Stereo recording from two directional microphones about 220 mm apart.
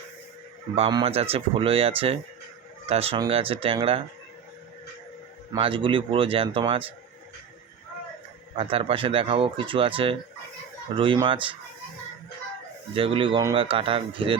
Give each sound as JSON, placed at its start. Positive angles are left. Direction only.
{"t": 0.8, "sound": "speech", "side_deg": -25}
{"t": 5.5, "sound": "speech", "side_deg": -25}
{"t": 8.5, "sound": "speech", "side_deg": -25}
{"t": 12.9, "sound": "speech", "side_deg": -25}